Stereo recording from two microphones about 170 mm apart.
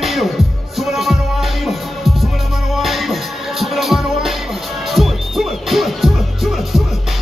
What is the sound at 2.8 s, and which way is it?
Music, centre (ahead or behind).